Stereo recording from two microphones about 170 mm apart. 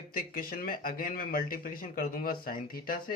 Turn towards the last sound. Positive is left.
turn(degrees=60)  # may be behind; listen again after turning